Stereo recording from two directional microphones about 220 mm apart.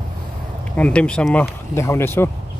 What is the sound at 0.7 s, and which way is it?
Speech, 5° left (ahead or behind).